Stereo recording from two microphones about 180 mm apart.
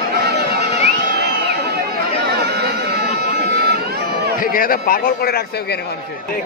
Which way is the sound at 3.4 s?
60° right (ahead or behind).